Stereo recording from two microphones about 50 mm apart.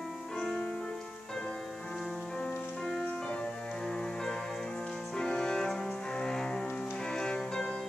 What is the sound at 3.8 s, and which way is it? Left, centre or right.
Music, centre.